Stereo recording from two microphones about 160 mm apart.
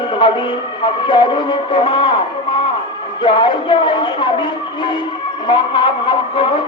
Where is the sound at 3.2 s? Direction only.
30° left (ahead or behind).